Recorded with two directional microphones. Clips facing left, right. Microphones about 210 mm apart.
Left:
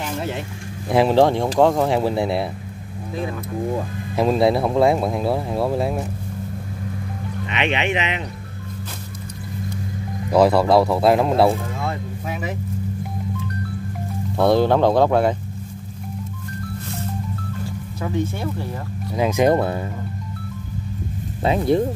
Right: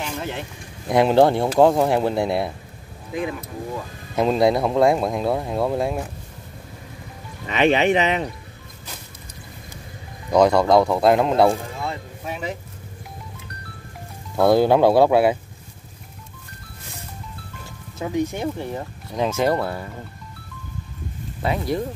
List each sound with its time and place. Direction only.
0.8 s speech: centre (ahead or behind)
4.1 s speech: centre (ahead or behind)
7.4 s speech: 40° right (ahead or behind)
10.3 s speech: 5° left (ahead or behind)
14.3 s speech: 5° right (ahead or behind)
18.0 s speech: 15° right (ahead or behind)
19.1 s speech: 10° left (ahead or behind)
21.4 s speech: 25° left (ahead or behind)